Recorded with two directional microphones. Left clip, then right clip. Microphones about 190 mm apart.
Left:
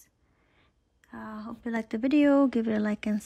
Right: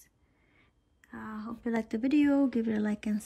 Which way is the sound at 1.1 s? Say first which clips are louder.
Left 1 dB; 5° left (ahead or behind).